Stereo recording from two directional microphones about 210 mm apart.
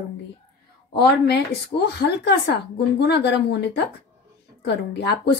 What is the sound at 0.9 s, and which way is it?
A woman's voice, 50° left (ahead or behind).